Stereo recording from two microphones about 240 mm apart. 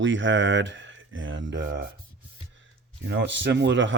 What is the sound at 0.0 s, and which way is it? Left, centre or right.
Speech, right.